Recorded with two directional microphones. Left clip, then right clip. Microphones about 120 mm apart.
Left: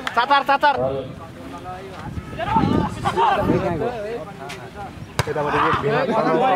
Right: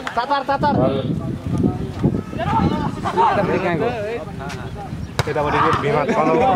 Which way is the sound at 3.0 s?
25° left (ahead or behind).